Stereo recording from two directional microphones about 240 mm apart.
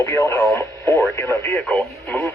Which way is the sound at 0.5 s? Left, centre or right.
Centre.